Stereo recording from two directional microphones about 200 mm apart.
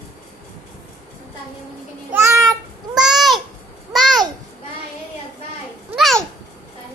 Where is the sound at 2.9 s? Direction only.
Centre (ahead or behind).